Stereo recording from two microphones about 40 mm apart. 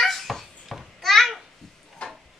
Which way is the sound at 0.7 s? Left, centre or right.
Centre.